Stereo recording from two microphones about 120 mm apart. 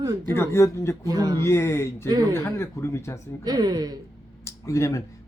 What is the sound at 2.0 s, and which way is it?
Speech, 35° right (ahead or behind).